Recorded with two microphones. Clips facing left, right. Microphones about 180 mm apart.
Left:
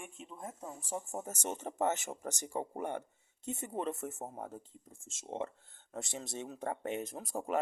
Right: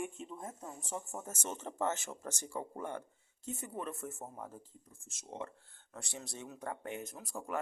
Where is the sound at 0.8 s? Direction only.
10° left (ahead or behind).